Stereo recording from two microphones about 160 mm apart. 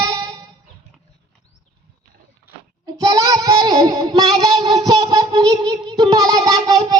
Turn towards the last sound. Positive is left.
turn(degrees=-20)  # may be behind; listen again after turning